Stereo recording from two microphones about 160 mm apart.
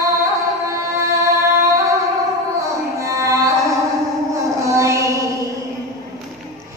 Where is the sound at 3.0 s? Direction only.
20° right (ahead or behind).